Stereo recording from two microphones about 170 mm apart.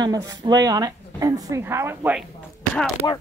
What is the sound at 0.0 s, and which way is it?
Speech, 20° right (ahead or behind).